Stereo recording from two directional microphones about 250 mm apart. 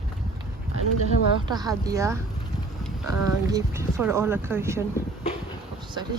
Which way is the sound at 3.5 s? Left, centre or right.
Centre.